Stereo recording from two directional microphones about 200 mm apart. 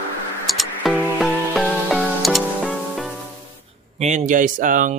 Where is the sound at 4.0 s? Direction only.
40° right (ahead or behind).